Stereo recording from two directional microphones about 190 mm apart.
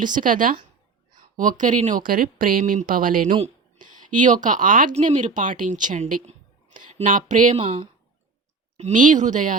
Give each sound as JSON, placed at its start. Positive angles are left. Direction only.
{"t": 0.0, "sound": "speech", "side_deg": -45}
{"t": 8.8, "sound": "speech", "side_deg": -45}